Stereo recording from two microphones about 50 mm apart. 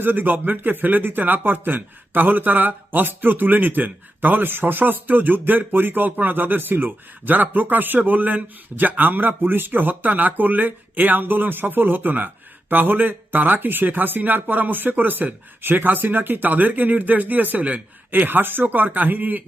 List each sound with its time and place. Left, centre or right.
0.0 s speech: right
18.3 s speech: right